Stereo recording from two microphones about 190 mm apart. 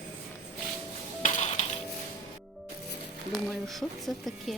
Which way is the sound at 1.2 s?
35° left (ahead or behind).